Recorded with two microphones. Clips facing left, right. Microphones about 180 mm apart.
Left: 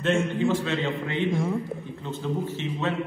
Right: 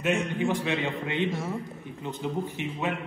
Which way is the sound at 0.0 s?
15° right (ahead or behind).